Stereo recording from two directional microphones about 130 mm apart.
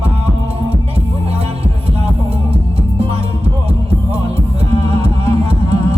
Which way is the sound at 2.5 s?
50° right (ahead or behind).